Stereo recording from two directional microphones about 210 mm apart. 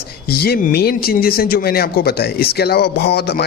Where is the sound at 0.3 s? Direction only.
50° left (ahead or behind).